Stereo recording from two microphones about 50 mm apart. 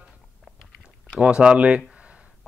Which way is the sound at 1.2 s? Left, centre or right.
Centre.